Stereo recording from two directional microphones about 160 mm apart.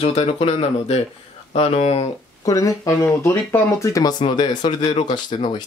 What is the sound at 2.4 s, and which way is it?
Speech, 20° left (ahead or behind).